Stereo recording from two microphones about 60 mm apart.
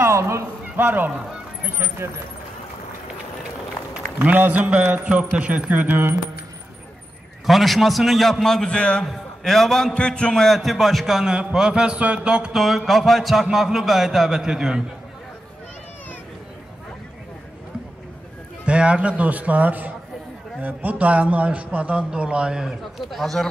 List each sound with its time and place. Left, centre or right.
0.0 s a sound: right
0.7 s speech: right
4.2 s a man's voice: right
7.4 s a man's voice: centre
9.0 s a man's voice: centre
9.9 s speech: centre
10.4 s a man's voice: centre
11.3 s mantra: centre
12.5 s a man's voice: centre
18.7 s a man's voice: centre
23.1 s a man's voice: centre